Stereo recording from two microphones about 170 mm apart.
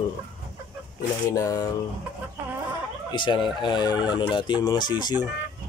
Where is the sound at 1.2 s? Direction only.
20° left (ahead or behind).